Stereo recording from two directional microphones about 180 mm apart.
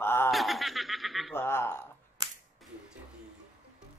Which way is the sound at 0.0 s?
15° left (ahead or behind).